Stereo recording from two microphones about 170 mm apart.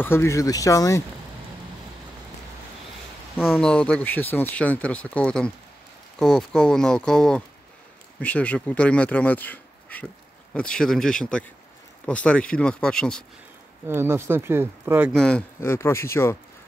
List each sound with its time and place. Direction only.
0.0 s speech: 15° left (ahead or behind)
3.5 s speech: 10° left (ahead or behind)
13.8 s speech: 15° right (ahead or behind)
15.1 s speech: 5° left (ahead or behind)